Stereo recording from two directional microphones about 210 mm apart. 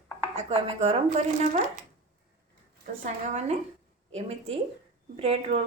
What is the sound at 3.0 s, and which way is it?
A woman's voice, 30° right (ahead or behind).